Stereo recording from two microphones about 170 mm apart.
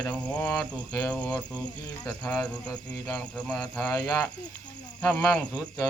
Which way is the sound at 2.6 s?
20° left (ahead or behind).